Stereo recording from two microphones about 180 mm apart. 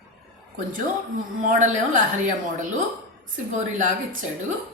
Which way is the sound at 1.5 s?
45° right (ahead or behind).